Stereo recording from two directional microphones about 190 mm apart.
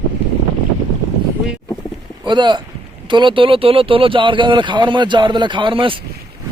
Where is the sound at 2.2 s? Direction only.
25° right (ahead or behind).